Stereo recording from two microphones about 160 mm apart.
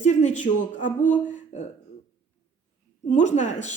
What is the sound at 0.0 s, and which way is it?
Speech, 45° left (ahead or behind).